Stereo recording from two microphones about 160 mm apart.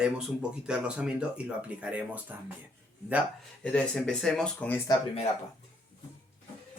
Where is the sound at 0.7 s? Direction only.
5° right (ahead or behind).